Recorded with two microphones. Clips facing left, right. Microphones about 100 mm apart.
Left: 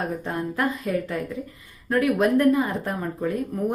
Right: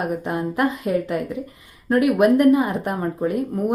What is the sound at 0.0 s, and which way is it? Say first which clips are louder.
A woman's voice: right 4 dB; 15° right (ahead or behind).